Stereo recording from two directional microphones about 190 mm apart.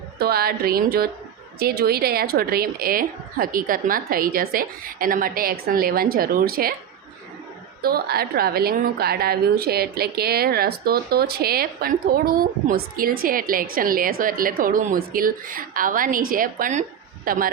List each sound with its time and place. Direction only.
0.2 s a woman's voice: 55° right (ahead or behind)
7.8 s a woman's voice: 55° right (ahead or behind)